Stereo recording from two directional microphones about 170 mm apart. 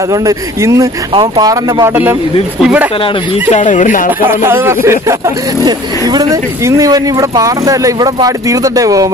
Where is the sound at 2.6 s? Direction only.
5° right (ahead or behind).